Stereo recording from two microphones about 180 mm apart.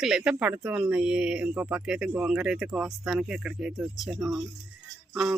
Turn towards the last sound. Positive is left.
turn(degrees=-5)  # may be behind; listen again after turning